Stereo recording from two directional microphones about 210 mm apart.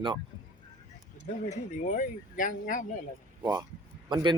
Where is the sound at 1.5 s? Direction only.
40° left (ahead or behind).